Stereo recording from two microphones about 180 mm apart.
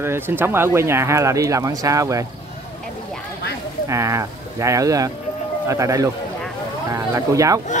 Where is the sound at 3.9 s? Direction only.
15° right (ahead or behind).